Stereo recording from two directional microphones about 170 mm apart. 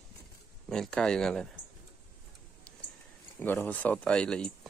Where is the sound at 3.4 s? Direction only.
10° left (ahead or behind).